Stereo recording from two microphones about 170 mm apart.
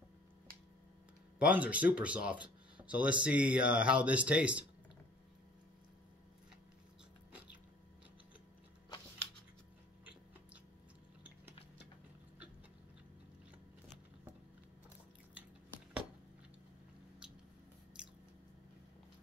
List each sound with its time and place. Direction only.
1.4 s speech: 10° right (ahead or behind)
18.0 s biting: 5° right (ahead or behind)